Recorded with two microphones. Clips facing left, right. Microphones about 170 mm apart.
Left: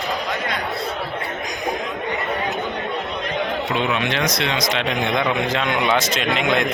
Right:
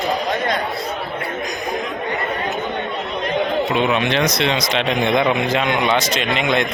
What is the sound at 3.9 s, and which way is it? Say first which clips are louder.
Speech: right 4 dB; 25° right (ahead or behind).